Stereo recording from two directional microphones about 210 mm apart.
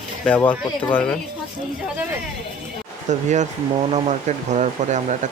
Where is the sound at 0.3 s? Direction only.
5° left (ahead or behind).